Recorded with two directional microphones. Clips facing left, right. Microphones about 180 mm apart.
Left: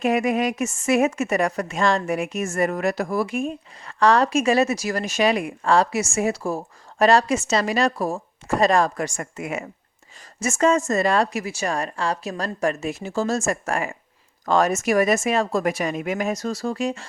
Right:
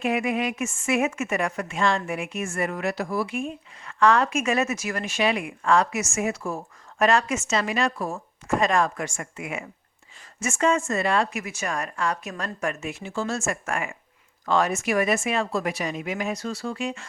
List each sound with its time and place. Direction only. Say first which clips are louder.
0.0 s a woman's voice: left 4 dB; 40° left (ahead or behind)